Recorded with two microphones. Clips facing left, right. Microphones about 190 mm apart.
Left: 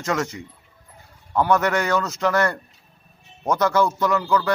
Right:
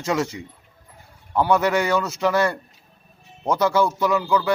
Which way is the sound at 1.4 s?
10° right (ahead or behind).